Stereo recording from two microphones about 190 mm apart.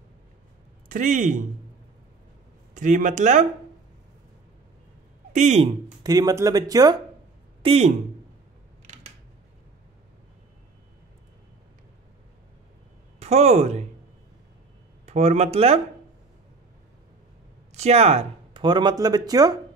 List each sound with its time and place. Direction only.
0.8 s speech: 45° right (ahead or behind)
2.7 s speech: 40° right (ahead or behind)
5.3 s speech: 35° right (ahead or behind)
6.0 s speech: 20° right (ahead or behind)
7.6 s speech: 30° right (ahead or behind)
13.2 s speech: 35° right (ahead or behind)
15.0 s speech: 35° right (ahead or behind)
17.7 s speech: 35° right (ahead or behind)